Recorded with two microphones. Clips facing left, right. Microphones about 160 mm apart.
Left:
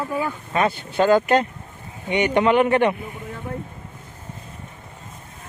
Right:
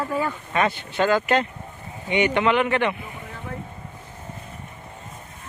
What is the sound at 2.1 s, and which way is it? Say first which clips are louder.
Speech: left 2 dB; 45° left (ahead or behind).